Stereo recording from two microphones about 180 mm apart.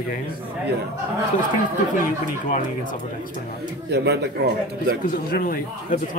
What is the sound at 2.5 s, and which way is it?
Speech, 45° left (ahead or behind).